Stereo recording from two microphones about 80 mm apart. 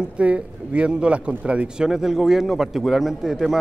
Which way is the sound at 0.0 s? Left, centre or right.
Centre.